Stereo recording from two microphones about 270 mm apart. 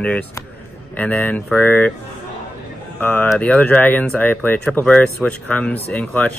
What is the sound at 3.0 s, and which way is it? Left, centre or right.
Speech, centre.